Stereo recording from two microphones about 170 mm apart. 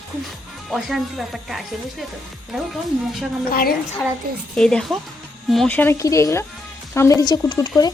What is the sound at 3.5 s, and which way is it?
Speech, 60° left (ahead or behind).